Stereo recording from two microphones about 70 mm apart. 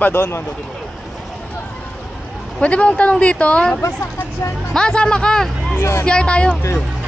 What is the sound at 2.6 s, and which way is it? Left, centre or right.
Speech, centre.